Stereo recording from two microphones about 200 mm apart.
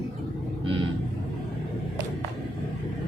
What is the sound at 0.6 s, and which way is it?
Vehicle, 25° right (ahead or behind).